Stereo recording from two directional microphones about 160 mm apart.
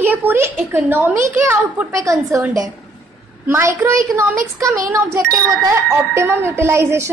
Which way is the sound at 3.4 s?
15° right (ahead or behind).